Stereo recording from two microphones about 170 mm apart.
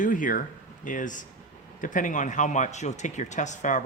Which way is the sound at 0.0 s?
50° left (ahead or behind).